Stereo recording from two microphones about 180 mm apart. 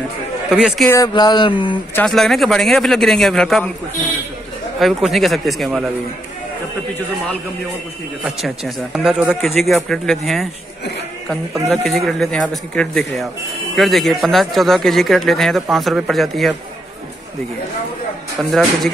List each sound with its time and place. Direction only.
0.5 s speech: 5° right (ahead or behind)
0.8 s a sound: 20° left (ahead or behind)
2.0 s speech: centre (ahead or behind)
4.7 s speech: centre (ahead or behind)
8.2 s speech: centre (ahead or behind)
11.7 s speech: centre (ahead or behind)
18.4 s speech: centre (ahead or behind)